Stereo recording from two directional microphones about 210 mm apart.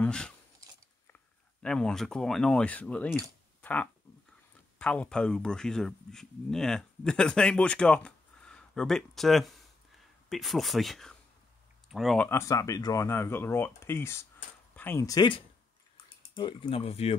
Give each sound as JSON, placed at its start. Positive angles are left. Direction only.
{"t": 0.0, "sound": "speech", "side_deg": 5}
{"t": 1.6, "sound": "speech", "side_deg": 5}
{"t": 12.3, "sound": "speech", "side_deg": 15}